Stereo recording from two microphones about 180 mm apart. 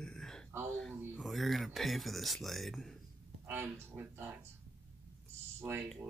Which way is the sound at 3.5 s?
10° right (ahead or behind).